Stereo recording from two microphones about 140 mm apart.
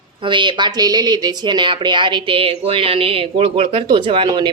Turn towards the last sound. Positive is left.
turn(degrees=-35)  # may be behind; listen again after turning